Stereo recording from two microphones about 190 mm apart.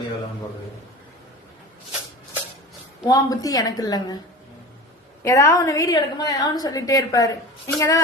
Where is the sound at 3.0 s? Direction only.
20° left (ahead or behind).